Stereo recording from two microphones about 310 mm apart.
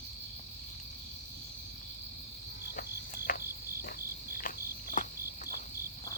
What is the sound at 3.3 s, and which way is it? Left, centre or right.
Cricket, left.